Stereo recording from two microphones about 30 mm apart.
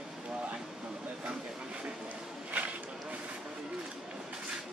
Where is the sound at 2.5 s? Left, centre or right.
Right.